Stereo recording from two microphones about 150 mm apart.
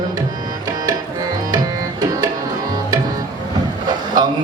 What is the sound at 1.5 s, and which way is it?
Tabla, 25° right (ahead or behind).